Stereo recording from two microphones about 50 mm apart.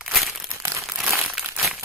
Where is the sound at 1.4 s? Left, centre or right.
Centre.